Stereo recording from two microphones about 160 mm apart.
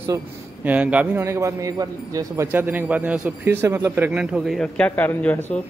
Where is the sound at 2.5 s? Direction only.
10° right (ahead or behind); by 5.4 s 10° left (ahead or behind).